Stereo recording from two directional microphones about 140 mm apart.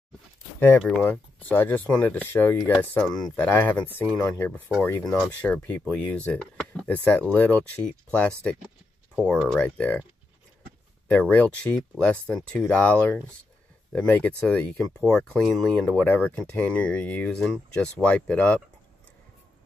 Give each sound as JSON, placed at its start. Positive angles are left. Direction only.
{"t": 0.6, "sound": "speech", "side_deg": 10}
{"t": 9.6, "sound": "speech", "side_deg": 10}
{"t": 11.1, "sound": "speech", "side_deg": 10}